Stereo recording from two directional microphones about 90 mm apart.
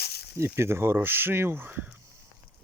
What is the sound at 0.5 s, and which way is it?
Speech, 30° right (ahead or behind).